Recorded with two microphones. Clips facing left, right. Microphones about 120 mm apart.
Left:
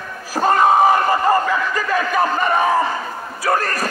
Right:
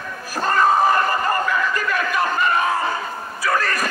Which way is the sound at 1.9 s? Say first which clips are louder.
Left 6 dB; 35° left (ahead or behind).